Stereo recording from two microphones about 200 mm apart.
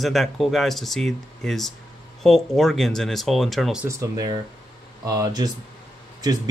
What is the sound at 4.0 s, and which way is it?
Speech, 20° right (ahead or behind).